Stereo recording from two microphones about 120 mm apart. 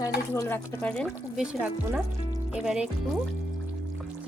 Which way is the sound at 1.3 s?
5° right (ahead or behind).